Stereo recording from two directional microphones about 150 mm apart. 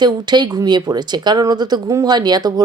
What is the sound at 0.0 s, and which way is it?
A woman's voice, 30° right (ahead or behind).